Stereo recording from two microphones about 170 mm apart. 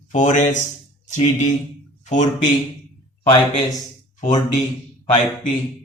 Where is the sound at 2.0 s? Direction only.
45° left (ahead or behind).